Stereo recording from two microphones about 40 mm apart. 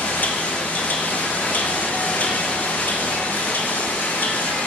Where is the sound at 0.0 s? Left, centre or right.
Left.